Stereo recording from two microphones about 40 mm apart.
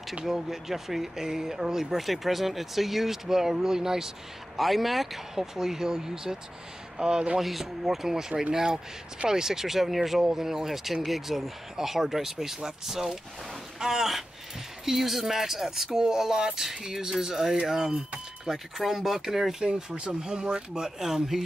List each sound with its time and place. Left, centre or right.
0.1 s speech: centre
4.6 s speech: centre; by 7.3 s right
7.3 s speech: centre
19.6 s speech: right